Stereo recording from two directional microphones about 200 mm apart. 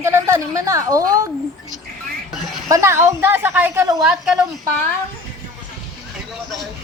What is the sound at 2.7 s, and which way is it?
A woman's voice, 15° right (ahead or behind).